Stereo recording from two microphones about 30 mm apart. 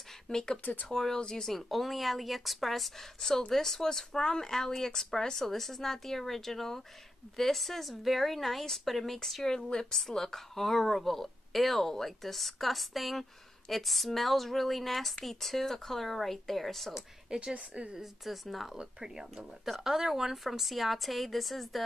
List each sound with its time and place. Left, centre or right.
0.3 s speech: left
1.5 s a woman's voice: centre
17.3 s a woman's voice: right
17.8 s a woman's voice: right
18.2 s a woman's voice: centre
19.0 s a woman's voice: centre